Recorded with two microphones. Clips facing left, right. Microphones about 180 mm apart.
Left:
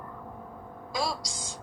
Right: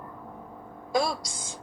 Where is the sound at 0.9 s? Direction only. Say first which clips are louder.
Right 5 dB; 55° right (ahead or behind).